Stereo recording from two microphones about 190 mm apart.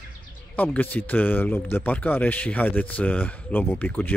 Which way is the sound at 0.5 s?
10° left (ahead or behind).